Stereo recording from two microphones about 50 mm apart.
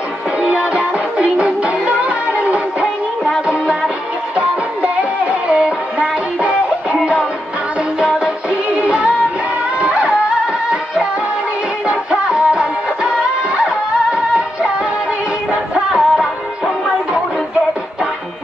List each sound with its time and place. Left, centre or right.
0.4 s music: right
4.4 s music: right
8.7 s music: right
11.9 s music of bollywood: right
14.1 s music: right
15.7 s music: centre